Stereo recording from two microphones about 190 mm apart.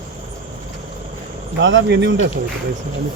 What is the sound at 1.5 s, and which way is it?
Speech, 75° right (ahead or behind).